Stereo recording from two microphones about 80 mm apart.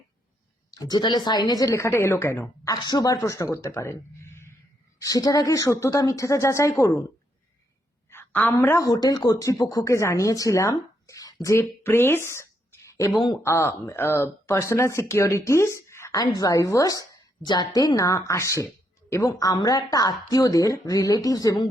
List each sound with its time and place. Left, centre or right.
0.7 s speech: left
2.6 s speech: left
3.2 s speech: left
4.9 s speech: left
8.1 s a woman's voice: left
8.8 s speech: left
11.8 s a sound: left
13.4 s speech: left
16.2 s speech: left
17.4 s a woman's voice: left
17.7 s speech: left
19.5 s speech: left